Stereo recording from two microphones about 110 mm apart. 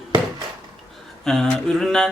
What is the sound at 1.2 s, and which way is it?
Speech, 5° left (ahead or behind).